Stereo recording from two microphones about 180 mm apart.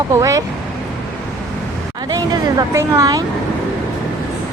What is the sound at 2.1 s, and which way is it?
Speech, 20° right (ahead or behind).